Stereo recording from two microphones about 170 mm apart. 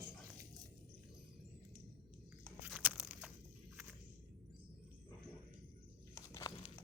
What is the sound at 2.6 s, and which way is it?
Biting, 5° right (ahead or behind).